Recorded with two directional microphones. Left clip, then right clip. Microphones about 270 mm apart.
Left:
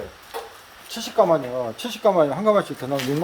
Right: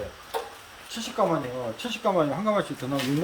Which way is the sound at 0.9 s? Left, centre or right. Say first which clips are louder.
Left 7 dB; centre.